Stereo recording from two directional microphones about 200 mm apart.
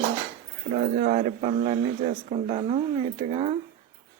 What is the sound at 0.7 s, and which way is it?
Speech, 40° right (ahead or behind).